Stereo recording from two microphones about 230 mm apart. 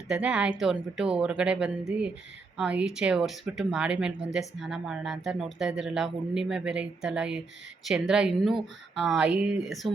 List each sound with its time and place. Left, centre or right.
0.1 s speech: centre